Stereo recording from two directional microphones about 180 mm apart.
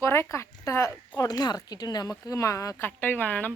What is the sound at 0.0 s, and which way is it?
A woman's voice, 15° left (ahead or behind).